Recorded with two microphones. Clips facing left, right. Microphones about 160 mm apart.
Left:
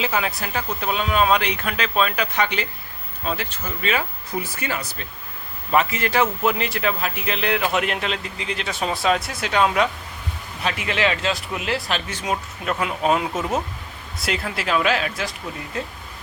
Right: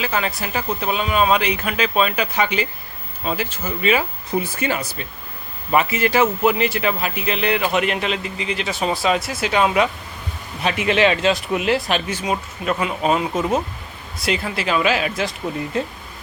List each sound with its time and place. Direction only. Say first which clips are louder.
0.1 s speech: right 1 dB; 5° left (ahead or behind)
4.4 s speech: right 5 dB; 20° right (ahead or behind)
4.8 s speech: right 4 dB; 10° right (ahead or behind)
10.6 s speech: right 6 dB; 20° right (ahead or behind)
12.2 s speech: right 3 dB; centre (ahead or behind)